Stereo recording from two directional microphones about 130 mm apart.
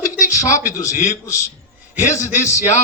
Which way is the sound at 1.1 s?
25° left (ahead or behind).